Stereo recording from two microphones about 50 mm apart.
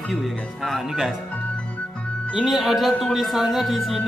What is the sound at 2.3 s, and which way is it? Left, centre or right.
Speech, centre.